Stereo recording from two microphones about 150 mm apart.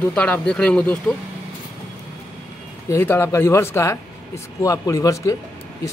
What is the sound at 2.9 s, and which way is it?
Speech, 15° left (ahead or behind).